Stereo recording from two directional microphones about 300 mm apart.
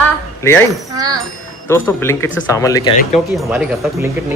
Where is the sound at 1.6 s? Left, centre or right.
Centre.